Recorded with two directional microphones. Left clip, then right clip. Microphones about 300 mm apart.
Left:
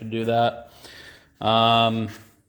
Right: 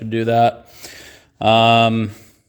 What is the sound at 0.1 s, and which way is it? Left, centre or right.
Speech, right.